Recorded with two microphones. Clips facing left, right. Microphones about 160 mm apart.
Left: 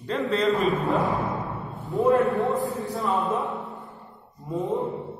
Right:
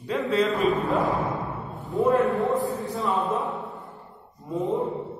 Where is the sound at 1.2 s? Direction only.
Centre (ahead or behind).